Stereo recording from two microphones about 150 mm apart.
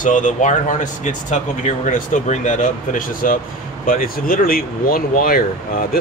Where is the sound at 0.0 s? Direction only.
55° left (ahead or behind).